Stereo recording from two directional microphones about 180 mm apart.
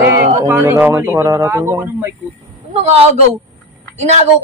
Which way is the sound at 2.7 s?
35° right (ahead or behind).